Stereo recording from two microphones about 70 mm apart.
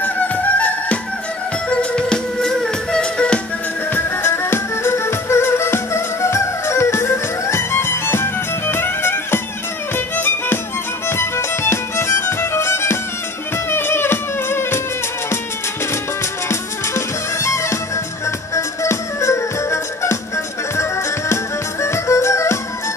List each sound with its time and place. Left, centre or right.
0.0 s music: left
3.9 s music: left
16.4 s music: left